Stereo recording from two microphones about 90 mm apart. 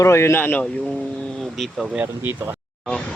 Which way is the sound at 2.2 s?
30° right (ahead or behind).